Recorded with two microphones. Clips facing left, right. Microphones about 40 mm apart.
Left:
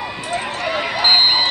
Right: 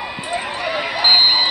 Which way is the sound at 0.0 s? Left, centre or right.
Centre.